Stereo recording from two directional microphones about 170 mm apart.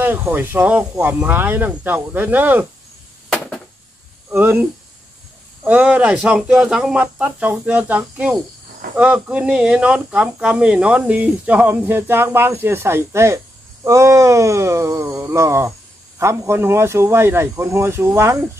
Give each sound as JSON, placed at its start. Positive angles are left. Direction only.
{"t": 0.0, "sound": "speech", "side_deg": -10}
{"t": 3.3, "sound": "a sound", "side_deg": 5}
{"t": 4.3, "sound": "speech", "side_deg": -10}